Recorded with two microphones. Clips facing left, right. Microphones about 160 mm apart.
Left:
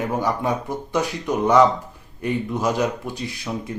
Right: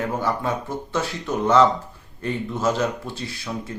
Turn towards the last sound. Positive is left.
turn(degrees=15)  # may be behind; listen again after turning